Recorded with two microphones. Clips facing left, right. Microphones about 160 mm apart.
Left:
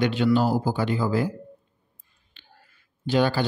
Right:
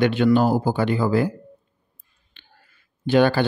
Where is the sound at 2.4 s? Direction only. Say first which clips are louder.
Even; 55° right (ahead or behind).